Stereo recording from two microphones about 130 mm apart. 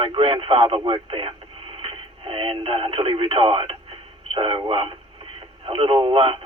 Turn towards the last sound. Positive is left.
turn(degrees=-45)  # may be behind; listen again after turning